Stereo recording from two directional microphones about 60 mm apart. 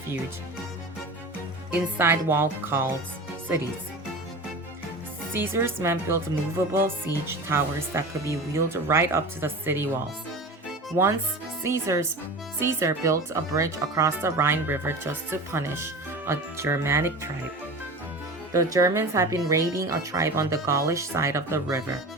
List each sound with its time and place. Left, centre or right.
2.0 s speech: right
5.3 s speech: right
11.0 s speech: right
14.2 s speech: right
18.5 s speech: right
18.9 s speech: right